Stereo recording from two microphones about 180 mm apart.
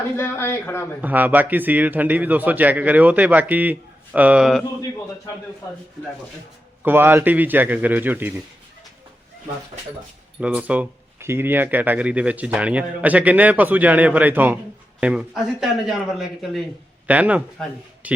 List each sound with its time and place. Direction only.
0.2 s speech: 10° left (ahead or behind)
1.0 s speech: 10° right (ahead or behind)
4.6 s a man's voice: 20° left (ahead or behind)
6.8 s speech: 10° right (ahead or behind)
10.4 s a man's voice: 5° right (ahead or behind)